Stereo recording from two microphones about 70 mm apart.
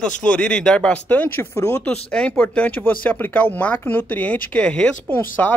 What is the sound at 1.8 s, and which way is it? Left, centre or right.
Speech, centre.